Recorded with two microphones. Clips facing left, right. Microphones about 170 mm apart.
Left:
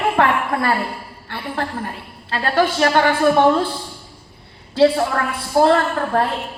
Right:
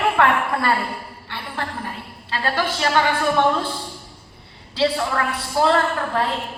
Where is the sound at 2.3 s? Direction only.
50° left (ahead or behind).